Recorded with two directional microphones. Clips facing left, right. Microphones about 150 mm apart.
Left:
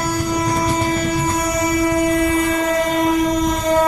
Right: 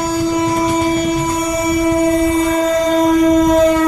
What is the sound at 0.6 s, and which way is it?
Train, 20° right (ahead or behind).